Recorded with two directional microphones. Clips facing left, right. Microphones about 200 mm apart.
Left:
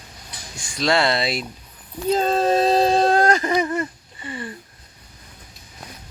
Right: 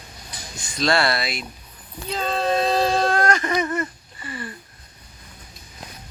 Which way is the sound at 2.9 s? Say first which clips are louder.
Left 3 dB; 30° left (ahead or behind).